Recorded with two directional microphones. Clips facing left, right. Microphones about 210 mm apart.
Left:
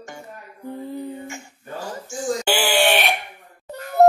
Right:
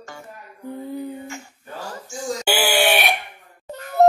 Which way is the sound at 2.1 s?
5° right (ahead or behind).